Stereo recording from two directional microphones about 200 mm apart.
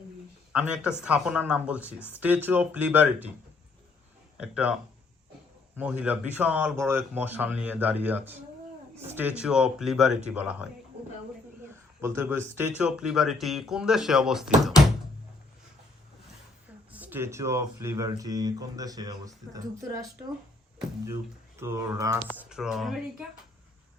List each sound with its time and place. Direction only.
0.5 s speech: 5° right (ahead or behind)
4.5 s speech: 5° right (ahead or behind)
11.9 s speech: 10° right (ahead or behind)
16.9 s speech: 10° right (ahead or behind)
21.6 s speech: 15° right (ahead or behind)
22.4 s speech: 5° right (ahead or behind)